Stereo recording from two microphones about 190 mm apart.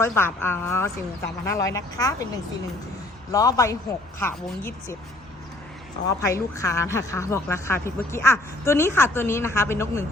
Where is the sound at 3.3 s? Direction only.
20° left (ahead or behind).